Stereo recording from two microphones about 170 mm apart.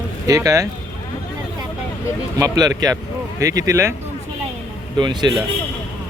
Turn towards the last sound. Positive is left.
turn(degrees=-25)  # may be behind; listen again after turning